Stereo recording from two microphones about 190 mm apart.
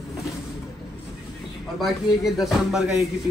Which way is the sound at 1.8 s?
Centre (ahead or behind).